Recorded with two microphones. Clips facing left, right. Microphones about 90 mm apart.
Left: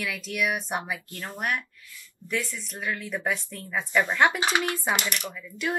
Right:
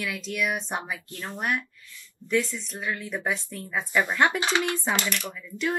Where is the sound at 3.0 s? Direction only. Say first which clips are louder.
Even; 10° right (ahead or behind).